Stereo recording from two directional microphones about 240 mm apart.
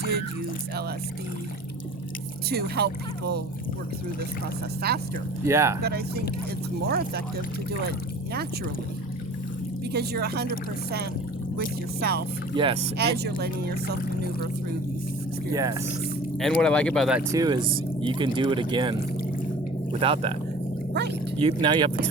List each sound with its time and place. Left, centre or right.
2.5 s speech: right
4.8 s speech: right
5.5 s speech: centre
5.8 s speech: right
9.9 s speech: right
11.5 s speech: right
12.5 s speech: right
13.0 s speech: right
15.5 s speech: centre
16.4 s speech: centre
17.3 s speech: centre
21.3 s speech: right